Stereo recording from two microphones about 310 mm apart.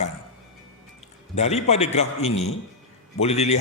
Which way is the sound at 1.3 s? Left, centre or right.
Left.